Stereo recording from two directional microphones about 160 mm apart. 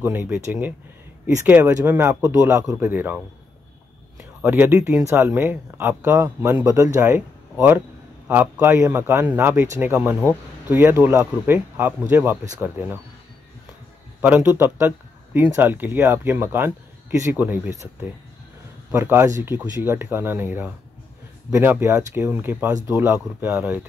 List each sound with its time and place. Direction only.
0.0 s a man's voice: 15° right (ahead or behind)
4.4 s a man's voice: 10° right (ahead or behind)
14.2 s a man's voice: 10° right (ahead or behind)
18.9 s a man's voice: 15° right (ahead or behind)